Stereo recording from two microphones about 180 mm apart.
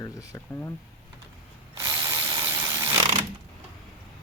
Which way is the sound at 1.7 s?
20° right (ahead or behind).